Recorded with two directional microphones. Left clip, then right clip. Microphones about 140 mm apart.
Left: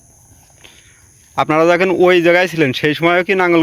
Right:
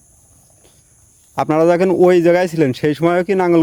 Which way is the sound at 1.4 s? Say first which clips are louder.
Left 1 dB; 30° right (ahead or behind).